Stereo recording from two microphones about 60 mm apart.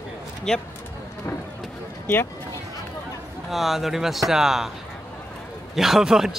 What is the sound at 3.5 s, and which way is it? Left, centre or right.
Speech, centre.